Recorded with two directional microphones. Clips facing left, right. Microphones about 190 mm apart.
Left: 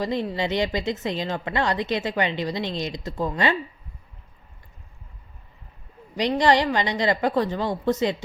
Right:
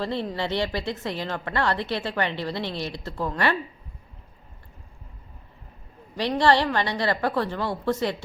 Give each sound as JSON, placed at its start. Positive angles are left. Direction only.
{"t": 0.0, "sound": "a woman's voice", "side_deg": 15}
{"t": 6.1, "sound": "a woman's voice", "side_deg": 15}